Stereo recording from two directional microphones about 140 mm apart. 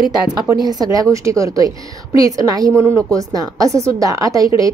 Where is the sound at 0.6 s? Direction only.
25° right (ahead or behind).